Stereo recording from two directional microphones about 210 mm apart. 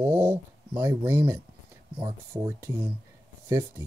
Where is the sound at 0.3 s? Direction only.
10° right (ahead or behind).